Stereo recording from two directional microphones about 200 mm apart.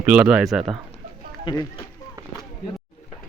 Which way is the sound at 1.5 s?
25° left (ahead or behind).